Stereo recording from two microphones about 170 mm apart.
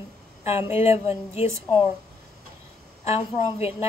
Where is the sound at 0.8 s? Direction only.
35° left (ahead or behind).